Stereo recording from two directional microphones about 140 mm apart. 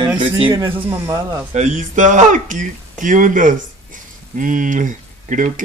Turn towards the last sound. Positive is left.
turn(degrees=-65)  # may be behind; listen again after turning